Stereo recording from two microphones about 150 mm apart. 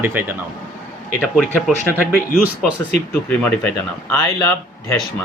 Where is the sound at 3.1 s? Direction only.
10° left (ahead or behind).